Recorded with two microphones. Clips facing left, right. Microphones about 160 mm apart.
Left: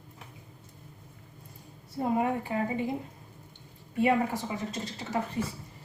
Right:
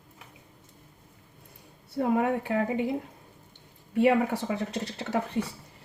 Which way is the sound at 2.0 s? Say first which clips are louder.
Right 3 dB; 70° right (ahead or behind).